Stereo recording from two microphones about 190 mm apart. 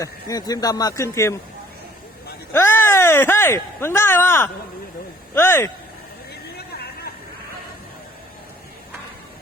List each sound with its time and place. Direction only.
0.0 s speech: 20° left (ahead or behind)
2.5 s speech: 10° left (ahead or behind)
6.6 s a sound: 55° left (ahead or behind)